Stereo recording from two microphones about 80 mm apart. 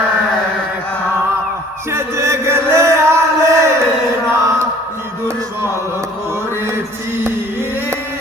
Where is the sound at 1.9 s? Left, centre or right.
Right.